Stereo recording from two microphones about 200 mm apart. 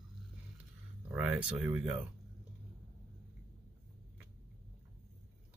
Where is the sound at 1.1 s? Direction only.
5° right (ahead or behind).